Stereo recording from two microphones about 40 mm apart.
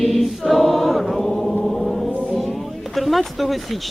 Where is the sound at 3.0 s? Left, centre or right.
Centre.